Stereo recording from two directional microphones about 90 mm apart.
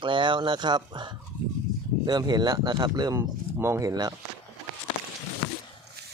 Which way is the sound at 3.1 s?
30° right (ahead or behind).